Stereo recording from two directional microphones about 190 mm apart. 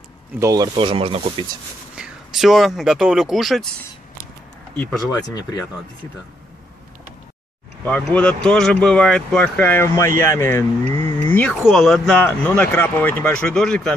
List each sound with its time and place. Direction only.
0.4 s speech: 15° right (ahead or behind)
0.7 s speech: 30° right (ahead or behind)
2.0 s speech: centre (ahead or behind)
4.7 s speech: 20° left (ahead or behind)
7.8 s speech: 10° left (ahead or behind)
11.2 s a sound: 10° left (ahead or behind)
11.6 s speech: centre (ahead or behind)